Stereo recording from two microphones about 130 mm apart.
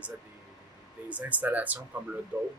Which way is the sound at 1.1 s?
10° right (ahead or behind).